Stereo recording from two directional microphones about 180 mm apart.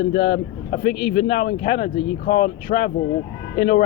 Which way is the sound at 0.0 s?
65° left (ahead or behind).